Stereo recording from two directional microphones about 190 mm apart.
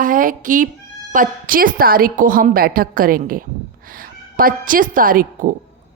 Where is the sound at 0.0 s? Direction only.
45° right (ahead or behind).